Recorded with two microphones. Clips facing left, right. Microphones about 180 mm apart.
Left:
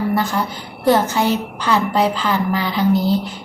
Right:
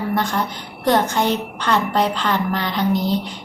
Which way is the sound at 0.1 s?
Centre (ahead or behind).